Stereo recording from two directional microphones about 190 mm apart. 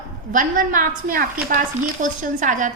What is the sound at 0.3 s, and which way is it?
A woman's voice, 45° right (ahead or behind).